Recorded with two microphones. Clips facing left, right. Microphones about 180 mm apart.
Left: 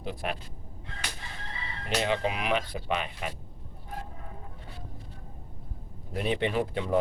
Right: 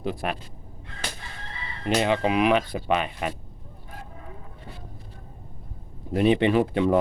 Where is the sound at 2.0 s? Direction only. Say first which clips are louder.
Right 6 dB; 85° right.